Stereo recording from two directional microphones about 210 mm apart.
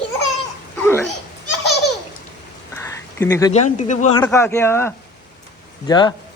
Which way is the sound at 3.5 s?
35° left (ahead or behind).